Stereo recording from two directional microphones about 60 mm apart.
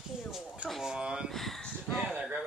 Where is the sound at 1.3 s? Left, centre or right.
Centre.